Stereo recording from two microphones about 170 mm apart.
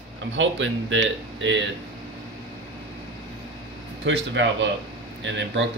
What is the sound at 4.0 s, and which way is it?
Speech, 90° right.